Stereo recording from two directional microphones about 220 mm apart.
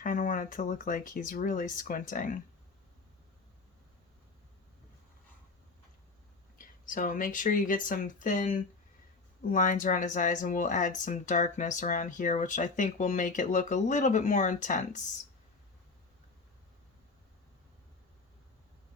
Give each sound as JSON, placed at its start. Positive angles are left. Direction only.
{"t": 0.0, "sound": "speech", "side_deg": 35}
{"t": 6.6, "sound": "speech", "side_deg": 35}